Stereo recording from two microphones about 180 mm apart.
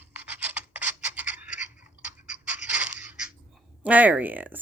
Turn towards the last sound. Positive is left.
turn(degrees=-10)  # may be behind; listen again after turning